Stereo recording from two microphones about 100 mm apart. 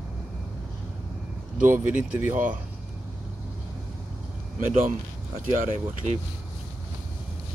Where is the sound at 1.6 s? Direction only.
20° right (ahead or behind).